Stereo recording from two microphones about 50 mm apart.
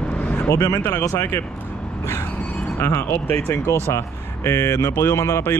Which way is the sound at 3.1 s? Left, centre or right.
Left.